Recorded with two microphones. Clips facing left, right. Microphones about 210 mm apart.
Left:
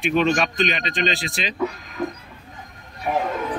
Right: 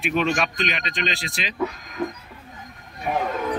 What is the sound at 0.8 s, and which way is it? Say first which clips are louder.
Speech: left 4 dB; 30° left (ahead or behind).